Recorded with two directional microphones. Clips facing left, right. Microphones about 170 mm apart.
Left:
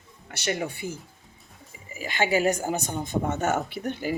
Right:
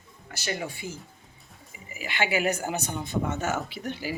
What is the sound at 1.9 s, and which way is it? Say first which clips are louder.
Speech: left 3 dB; 40° left (ahead or behind).